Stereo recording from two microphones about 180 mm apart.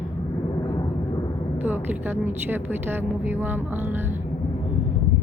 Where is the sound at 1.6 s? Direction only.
10° right (ahead or behind).